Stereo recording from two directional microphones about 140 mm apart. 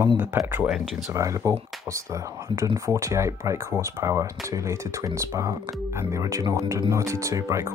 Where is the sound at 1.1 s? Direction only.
20° right (ahead or behind).